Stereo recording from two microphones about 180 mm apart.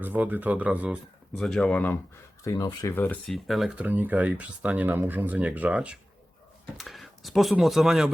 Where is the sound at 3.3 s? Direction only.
Centre (ahead or behind).